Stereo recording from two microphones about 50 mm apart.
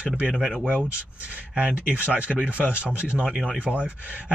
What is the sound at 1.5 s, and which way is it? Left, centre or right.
Speech, centre.